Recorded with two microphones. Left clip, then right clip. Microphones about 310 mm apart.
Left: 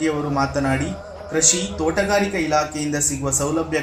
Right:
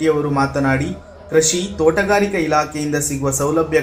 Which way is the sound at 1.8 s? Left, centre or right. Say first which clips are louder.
Right 5 dB; centre.